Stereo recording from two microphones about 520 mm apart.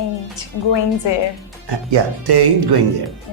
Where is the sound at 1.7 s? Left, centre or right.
Right.